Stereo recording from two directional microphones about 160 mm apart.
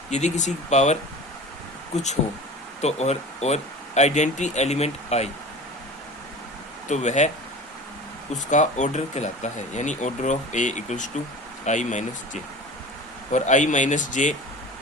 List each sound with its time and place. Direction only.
0.1 s speech: 45° left (ahead or behind)
6.8 s speech: 45° left (ahead or behind)
8.3 s speech: 50° left (ahead or behind)